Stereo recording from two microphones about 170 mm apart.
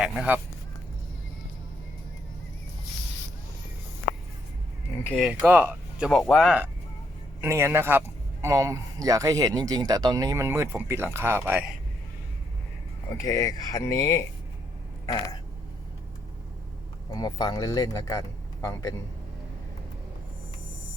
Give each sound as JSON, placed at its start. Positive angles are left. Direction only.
{"t": 0.0, "sound": "speech", "side_deg": -5}
{"t": 5.0, "sound": "speech", "side_deg": 0}
{"t": 6.1, "sound": "speech", "side_deg": 5}
{"t": 7.4, "sound": "a man's voice", "side_deg": -15}
{"t": 13.1, "sound": "speech", "side_deg": 20}
{"t": 17.1, "sound": "speech", "side_deg": 25}